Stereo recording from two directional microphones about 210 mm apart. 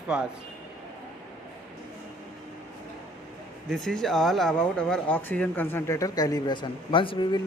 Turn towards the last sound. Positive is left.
turn(degrees=25)  # may be behind; listen again after turning